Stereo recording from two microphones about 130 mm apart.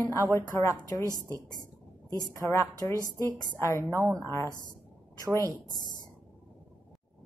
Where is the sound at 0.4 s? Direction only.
20° left (ahead or behind).